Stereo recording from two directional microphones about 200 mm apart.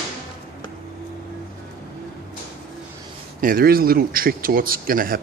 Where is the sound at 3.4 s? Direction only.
45° right (ahead or behind).